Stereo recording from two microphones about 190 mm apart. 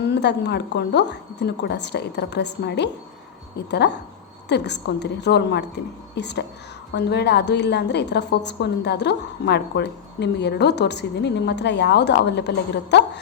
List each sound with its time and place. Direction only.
0.0 s a woman's voice: 65° left (ahead or behind)